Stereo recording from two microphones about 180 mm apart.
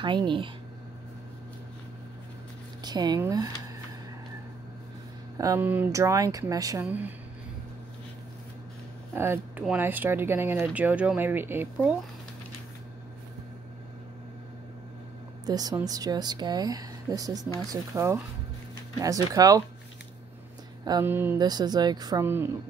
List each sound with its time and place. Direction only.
0.0 s a woman's voice: 25° right (ahead or behind)
2.8 s speech: 25° right (ahead or behind)
5.4 s a woman's voice: 15° right (ahead or behind)
9.1 s speech: 10° right (ahead or behind)
15.4 s a woman's voice: 20° right (ahead or behind)
20.8 s a sound: 20° right (ahead or behind)
21.1 s speech: 10° right (ahead or behind)
21.4 s a woman's voice: 20° right (ahead or behind)